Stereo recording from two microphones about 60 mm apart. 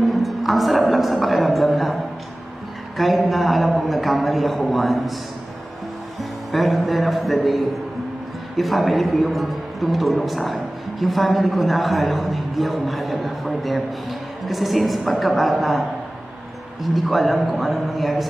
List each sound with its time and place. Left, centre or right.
0.1 s a man's voice: centre
3.0 s speech: centre
6.5 s speech: centre
16.8 s speech: centre